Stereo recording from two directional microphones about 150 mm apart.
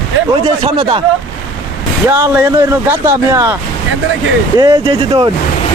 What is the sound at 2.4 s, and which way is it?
Speech, 20° right (ahead or behind).